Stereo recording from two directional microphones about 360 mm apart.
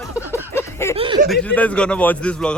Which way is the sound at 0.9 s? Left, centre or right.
Centre.